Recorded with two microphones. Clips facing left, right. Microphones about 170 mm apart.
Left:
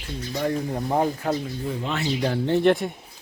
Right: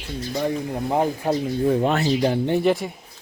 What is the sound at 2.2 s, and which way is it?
Speech, 15° right (ahead or behind).